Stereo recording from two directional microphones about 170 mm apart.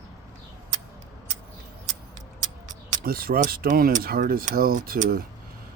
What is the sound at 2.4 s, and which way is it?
Speech, 45° right (ahead or behind).